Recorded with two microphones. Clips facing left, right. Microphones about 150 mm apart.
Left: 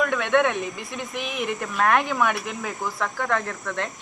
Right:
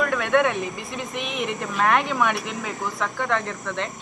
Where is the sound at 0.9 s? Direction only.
60° right (ahead or behind).